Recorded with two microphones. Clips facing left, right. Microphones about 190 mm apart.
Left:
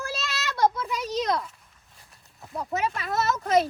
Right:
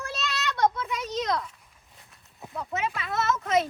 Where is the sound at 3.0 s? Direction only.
40° left (ahead or behind).